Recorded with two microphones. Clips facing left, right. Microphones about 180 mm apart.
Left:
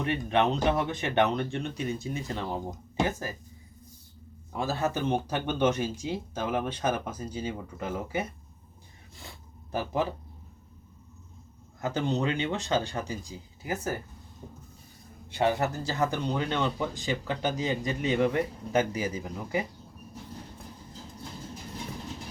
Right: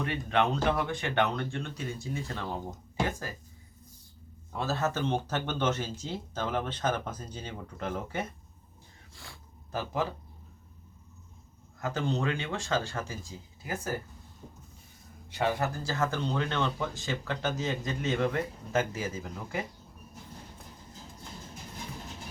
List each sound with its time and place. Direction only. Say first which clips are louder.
0.0 s speech: left 2 dB; 20° left (ahead or behind)
4.5 s speech: left 1 dB; 15° left (ahead or behind)
9.7 s speech: left 3 dB; 15° left (ahead or behind)
11.8 s speech: left 3 dB; 20° left (ahead or behind)
15.4 s speech: left 3 dB; 20° left (ahead or behind)